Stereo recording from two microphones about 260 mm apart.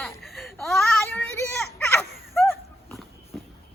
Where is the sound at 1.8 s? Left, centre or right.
Centre.